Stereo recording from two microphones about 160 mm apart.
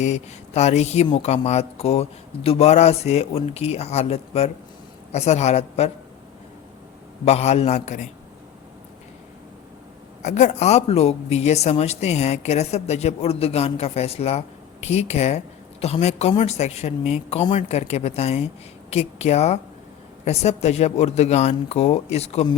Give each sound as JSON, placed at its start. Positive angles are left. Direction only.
{"t": 0.0, "sound": "speech", "side_deg": 45}
{"t": 7.3, "sound": "speech", "side_deg": 40}
{"t": 10.2, "sound": "speech", "side_deg": 50}